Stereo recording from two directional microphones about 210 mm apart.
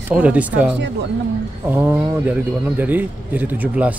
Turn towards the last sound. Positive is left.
turn(degrees=-5)  # may be behind; listen again after turning